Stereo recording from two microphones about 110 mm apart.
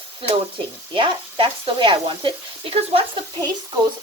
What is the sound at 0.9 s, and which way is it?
Speech, 50° right (ahead or behind).